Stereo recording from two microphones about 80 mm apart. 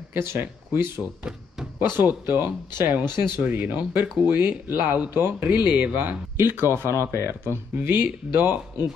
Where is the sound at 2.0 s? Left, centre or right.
Right.